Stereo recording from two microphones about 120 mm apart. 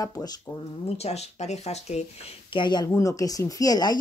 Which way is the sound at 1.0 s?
65° left (ahead or behind).